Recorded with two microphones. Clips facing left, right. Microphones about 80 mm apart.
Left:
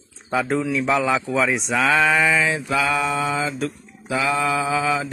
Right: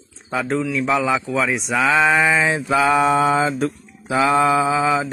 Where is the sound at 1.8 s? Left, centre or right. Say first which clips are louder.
Right 2 dB; centre.